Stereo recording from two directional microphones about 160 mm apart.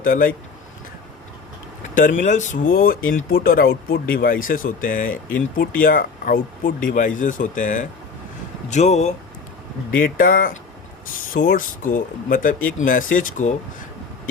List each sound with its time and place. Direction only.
0.0 s speech: 60° left (ahead or behind)
2.0 s speech: 55° left (ahead or behind)
10.0 s speech: 60° left (ahead or behind)